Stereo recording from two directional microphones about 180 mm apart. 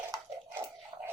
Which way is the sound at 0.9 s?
20° right (ahead or behind).